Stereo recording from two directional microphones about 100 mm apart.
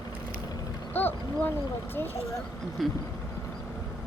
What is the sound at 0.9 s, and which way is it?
Boat, 20° left (ahead or behind).